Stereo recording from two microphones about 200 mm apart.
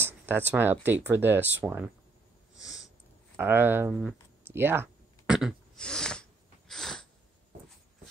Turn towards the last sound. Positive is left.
turn(degrees=0)  # may be behind; listen again after turning